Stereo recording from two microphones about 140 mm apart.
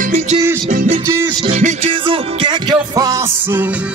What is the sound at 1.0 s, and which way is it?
Music, 20° right (ahead or behind).